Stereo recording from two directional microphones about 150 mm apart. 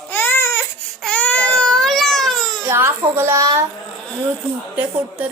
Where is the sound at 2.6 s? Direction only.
15° right (ahead or behind).